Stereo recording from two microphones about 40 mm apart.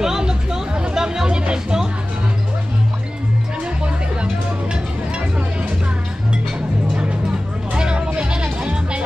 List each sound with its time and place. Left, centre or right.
0.0 s music: centre
7.7 s vehicle: right
8.1 s music: right